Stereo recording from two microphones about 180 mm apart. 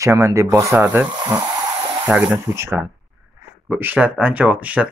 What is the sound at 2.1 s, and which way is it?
Speech, 5° right (ahead or behind).